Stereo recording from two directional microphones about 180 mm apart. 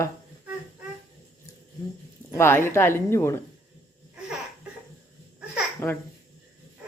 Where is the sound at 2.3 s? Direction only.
15° left (ahead or behind).